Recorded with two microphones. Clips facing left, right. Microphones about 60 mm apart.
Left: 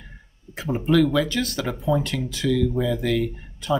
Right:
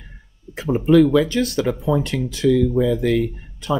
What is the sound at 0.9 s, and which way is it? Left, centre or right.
Speech, right.